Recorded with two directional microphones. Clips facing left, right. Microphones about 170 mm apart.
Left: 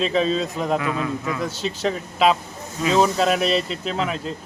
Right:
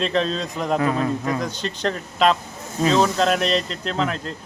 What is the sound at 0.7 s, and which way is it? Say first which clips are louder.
Speech: right 6 dB; 40° right (ahead or behind).